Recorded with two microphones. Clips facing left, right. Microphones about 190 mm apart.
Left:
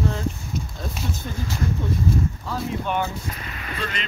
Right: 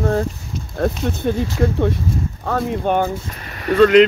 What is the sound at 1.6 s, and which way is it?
Speech, 75° right (ahead or behind).